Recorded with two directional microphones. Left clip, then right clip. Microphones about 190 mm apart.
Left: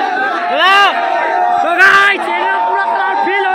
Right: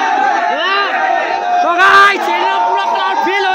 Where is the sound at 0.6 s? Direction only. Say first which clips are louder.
Left 6 dB; 20° left (ahead or behind).